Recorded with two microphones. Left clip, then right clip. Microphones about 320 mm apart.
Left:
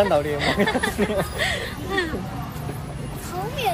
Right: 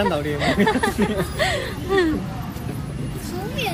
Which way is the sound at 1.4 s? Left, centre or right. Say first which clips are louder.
Right 2 dB; centre.